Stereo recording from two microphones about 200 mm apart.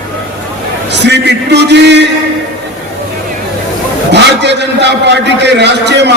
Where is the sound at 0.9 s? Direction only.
60° right (ahead or behind).